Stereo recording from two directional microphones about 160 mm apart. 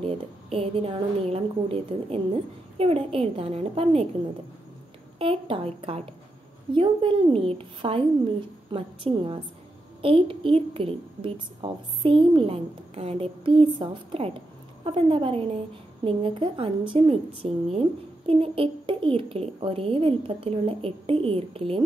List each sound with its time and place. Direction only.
0.0 s a woman's voice: 35° right (ahead or behind)
5.2 s a woman's voice: 35° right (ahead or behind)